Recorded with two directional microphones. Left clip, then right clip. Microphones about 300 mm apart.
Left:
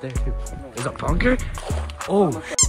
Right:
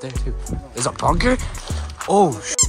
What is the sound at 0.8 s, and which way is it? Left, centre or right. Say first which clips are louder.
Speech: right 4 dB; centre.